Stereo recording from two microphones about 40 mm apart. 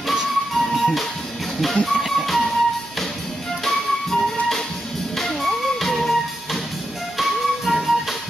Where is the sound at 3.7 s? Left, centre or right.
Centre.